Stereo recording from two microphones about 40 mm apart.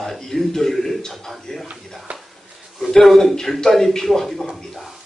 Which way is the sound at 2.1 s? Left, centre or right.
Right.